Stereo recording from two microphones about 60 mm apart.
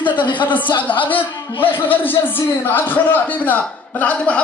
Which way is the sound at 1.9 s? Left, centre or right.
Left.